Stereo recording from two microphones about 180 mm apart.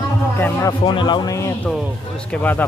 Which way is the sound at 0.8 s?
25° left (ahead or behind).